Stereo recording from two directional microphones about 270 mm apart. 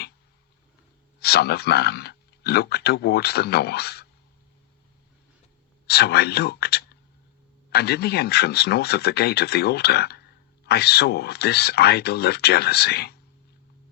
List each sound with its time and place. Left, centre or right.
1.2 s speech: left
5.9 s speech: left